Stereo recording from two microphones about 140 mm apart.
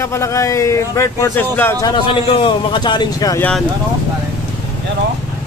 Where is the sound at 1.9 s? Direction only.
40° left (ahead or behind).